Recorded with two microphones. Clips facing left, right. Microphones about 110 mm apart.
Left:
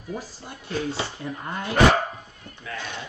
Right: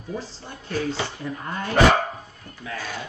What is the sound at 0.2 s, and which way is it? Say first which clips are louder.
Speech: right 2 dB; 10° left (ahead or behind).